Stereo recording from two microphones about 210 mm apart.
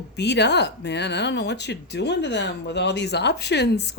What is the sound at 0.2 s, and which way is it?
Speech, 55° left (ahead or behind).